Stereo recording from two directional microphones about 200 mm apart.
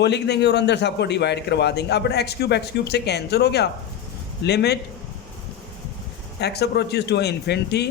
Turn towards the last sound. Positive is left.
turn(degrees=55)  # may be behind; listen again after turning